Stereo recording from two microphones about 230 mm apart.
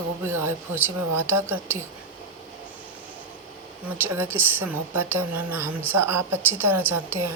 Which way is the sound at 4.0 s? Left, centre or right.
Centre.